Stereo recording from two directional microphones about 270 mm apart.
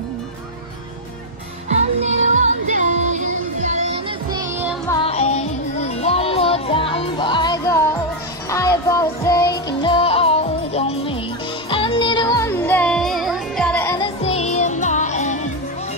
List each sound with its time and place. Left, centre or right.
1.7 s music: right
4.3 s music: centre
5.0 s music: left